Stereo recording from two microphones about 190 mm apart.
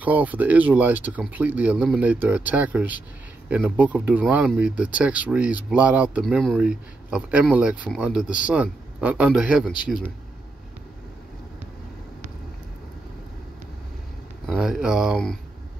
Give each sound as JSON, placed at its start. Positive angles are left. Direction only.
{"t": 0.0, "sound": "speech", "side_deg": -10}
{"t": 14.4, "sound": "speech", "side_deg": -5}